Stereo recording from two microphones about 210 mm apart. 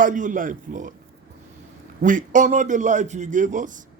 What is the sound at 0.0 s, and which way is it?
Speech, 35° right (ahead or behind).